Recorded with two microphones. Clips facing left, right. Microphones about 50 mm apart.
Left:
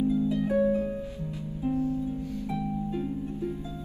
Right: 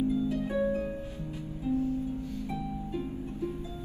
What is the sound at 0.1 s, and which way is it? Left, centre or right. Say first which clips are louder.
Harp: left 4 dB; left.